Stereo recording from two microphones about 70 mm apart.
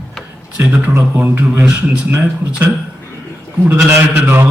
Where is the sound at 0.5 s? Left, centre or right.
Right.